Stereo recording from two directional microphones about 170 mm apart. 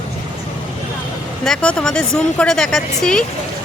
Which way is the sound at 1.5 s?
5° left (ahead or behind).